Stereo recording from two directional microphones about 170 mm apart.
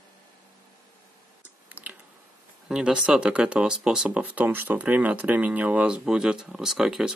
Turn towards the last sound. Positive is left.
turn(degrees=-5)  # may be behind; listen again after turning